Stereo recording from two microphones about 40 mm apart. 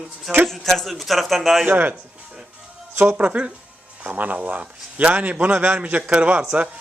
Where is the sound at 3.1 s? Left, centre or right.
Right.